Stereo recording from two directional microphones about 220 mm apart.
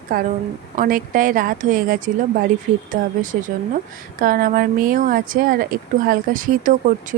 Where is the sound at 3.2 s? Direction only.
35° right (ahead or behind).